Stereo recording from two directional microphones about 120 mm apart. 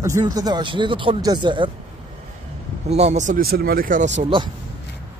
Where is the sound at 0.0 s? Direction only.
30° right (ahead or behind).